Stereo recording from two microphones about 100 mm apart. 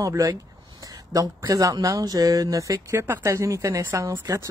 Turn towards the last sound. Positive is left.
turn(degrees=-30)  # may be behind; listen again after turning